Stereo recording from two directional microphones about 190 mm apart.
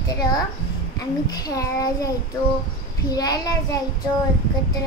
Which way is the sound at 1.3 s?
20° left (ahead or behind).